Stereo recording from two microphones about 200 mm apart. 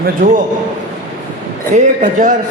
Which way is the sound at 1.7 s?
40° right (ahead or behind).